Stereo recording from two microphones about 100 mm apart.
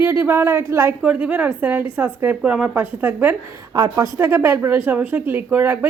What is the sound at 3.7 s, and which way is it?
Speech, 35° right (ahead or behind).